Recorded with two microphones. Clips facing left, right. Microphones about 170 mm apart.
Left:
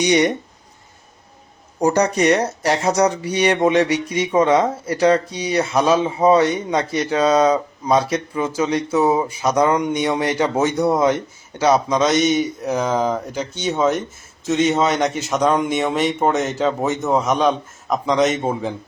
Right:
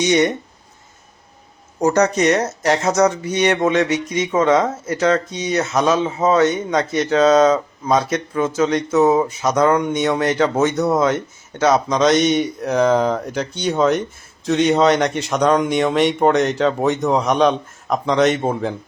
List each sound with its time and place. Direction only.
0.0 s speech: 15° left (ahead or behind)
1.8 s speech: 10° left (ahead or behind)
3.3 s speech: 15° left (ahead or behind)
4.4 s speech: 30° left (ahead or behind)
4.9 s speech: 15° left (ahead or behind)